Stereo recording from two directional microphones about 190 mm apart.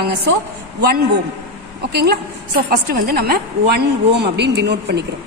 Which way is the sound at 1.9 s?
55° right (ahead or behind).